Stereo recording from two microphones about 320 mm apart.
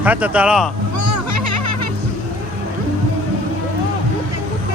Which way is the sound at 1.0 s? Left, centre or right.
Right.